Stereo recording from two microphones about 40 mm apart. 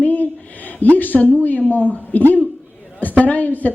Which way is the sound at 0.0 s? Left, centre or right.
Left.